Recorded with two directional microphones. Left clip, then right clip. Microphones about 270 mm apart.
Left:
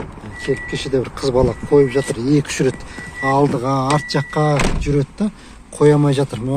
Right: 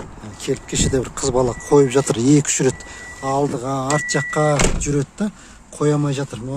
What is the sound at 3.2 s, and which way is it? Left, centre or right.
Speech, centre.